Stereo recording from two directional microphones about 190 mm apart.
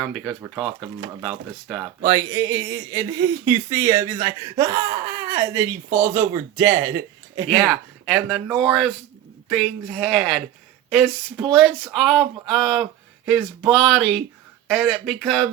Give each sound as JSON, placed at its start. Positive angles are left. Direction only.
{"t": 0.0, "sound": "speech", "side_deg": 0}
{"t": 2.0, "sound": "speech", "side_deg": -15}
{"t": 7.7, "sound": "speech", "side_deg": 5}